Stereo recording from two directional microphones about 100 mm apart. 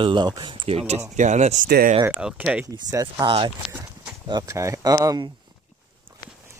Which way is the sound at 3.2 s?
60° right (ahead or behind).